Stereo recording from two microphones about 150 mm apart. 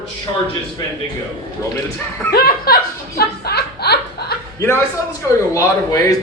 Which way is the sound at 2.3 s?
90° left.